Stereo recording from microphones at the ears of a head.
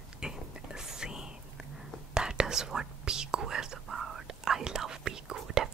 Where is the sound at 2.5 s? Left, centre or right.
Right.